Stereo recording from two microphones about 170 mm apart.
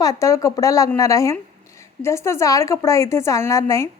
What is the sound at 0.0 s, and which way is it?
Speech, 20° left (ahead or behind).